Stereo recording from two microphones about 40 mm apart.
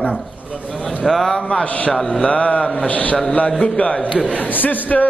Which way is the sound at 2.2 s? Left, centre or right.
Left.